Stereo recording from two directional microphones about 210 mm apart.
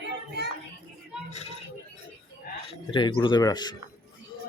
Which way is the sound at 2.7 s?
25° left (ahead or behind).